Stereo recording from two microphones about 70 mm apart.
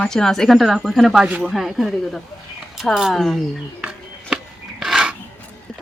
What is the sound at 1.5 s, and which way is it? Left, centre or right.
A woman's voice, centre.